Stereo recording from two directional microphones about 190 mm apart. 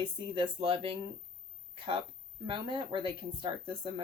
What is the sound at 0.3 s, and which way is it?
Speech, 30° right (ahead or behind).